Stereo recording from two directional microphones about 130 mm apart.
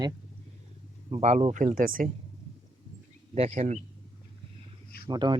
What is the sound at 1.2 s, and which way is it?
Speech, 60° right (ahead or behind).